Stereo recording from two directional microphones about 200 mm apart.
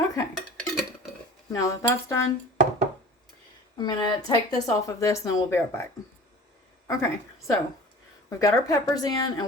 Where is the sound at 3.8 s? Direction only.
20° left (ahead or behind).